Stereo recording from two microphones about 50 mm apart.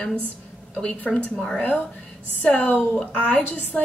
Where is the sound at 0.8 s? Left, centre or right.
Left.